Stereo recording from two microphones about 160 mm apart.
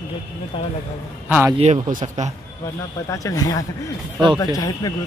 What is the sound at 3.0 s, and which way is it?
Speech, 20° left (ahead or behind).